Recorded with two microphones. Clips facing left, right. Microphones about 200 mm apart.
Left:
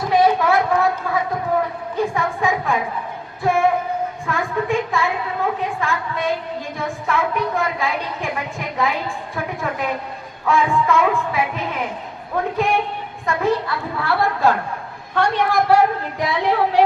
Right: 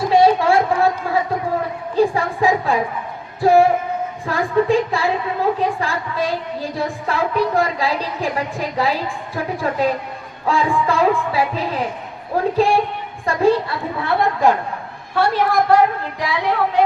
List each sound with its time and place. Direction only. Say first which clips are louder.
0.1 s a sound: right 2 dB; 30° right (ahead or behind)
3.4 s singing: right 5 dB; 35° right (ahead or behind)
4.3 s a sound: right 6 dB; 35° right (ahead or behind)
5.8 s a woman's voice: right 1 dB; 35° right (ahead or behind)
10.4 s music: even; 30° right (ahead or behind)
13.2 s a woman's voice: right 4 dB; 30° right (ahead or behind)
15.1 s a woman's voice: right 1 dB; 5° right (ahead or behind)
16.2 s a woman's voice: left 1 dB; 25° left (ahead or behind)